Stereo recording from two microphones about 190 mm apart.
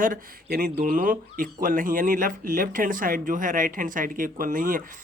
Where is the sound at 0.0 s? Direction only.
50° right (ahead or behind).